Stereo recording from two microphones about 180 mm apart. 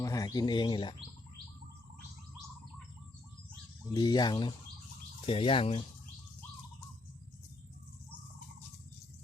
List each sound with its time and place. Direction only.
0.0 s speech: 20° left (ahead or behind)
3.9 s speech: 20° left (ahead or behind)